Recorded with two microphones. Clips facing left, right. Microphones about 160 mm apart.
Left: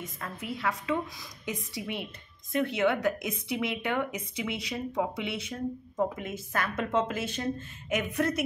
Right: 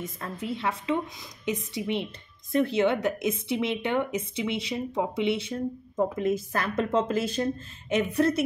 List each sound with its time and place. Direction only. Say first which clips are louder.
0.2 s a woman's voice: right 2 dB; 30° right (ahead or behind)